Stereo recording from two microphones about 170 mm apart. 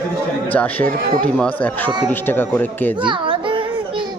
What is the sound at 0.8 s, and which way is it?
Speech, 55° right (ahead or behind).